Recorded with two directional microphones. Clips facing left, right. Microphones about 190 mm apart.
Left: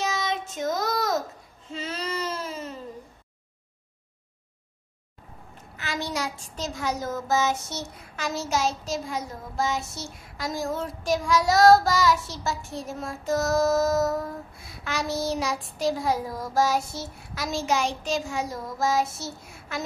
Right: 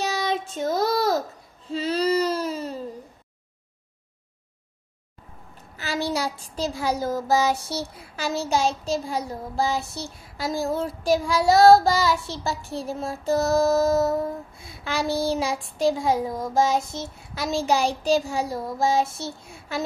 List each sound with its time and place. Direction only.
0.0 s child singing: 35° right (ahead or behind)
1.7 s a sound: 35° right (ahead or behind)
5.8 s a child's voice: 35° right (ahead or behind)
14.9 s child singing: 30° right (ahead or behind)
17.3 s a child's voice: 30° right (ahead or behind)